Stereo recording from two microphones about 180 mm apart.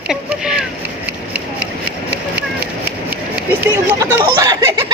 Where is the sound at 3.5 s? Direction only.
10° right (ahead or behind).